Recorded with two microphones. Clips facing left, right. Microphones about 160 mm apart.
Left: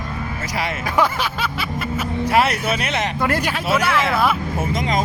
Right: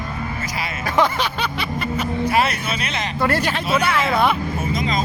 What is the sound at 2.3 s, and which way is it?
Speech, 65° left (ahead or behind).